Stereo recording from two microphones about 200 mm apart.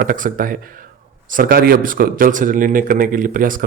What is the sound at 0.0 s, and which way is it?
A man's voice, 45° right (ahead or behind).